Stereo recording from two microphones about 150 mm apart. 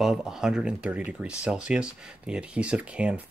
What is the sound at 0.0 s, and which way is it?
Speech, 5° right (ahead or behind).